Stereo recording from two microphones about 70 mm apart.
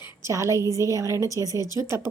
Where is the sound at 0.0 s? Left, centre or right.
Right.